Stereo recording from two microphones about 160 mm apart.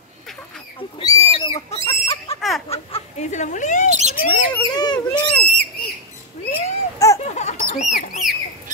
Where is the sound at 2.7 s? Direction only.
45° left (ahead or behind).